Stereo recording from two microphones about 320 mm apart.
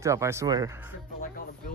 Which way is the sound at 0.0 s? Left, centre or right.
Centre.